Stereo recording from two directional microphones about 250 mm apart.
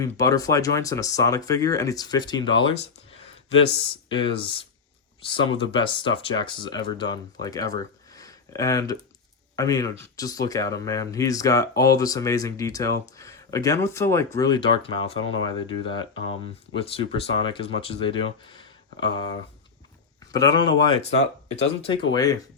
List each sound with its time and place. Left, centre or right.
0.0 s speech: centre
4.1 s speech: left
8.1 s a sound: centre
9.6 s speech: centre
20.3 s speech: centre